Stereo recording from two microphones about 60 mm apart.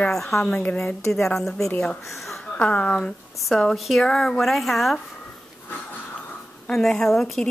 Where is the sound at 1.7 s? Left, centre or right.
Left.